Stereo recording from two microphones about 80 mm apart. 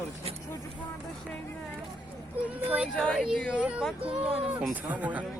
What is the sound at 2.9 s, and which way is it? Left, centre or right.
Speech, centre.